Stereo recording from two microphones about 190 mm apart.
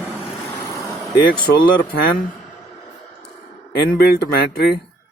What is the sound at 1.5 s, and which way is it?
Speech, 55° left (ahead or behind).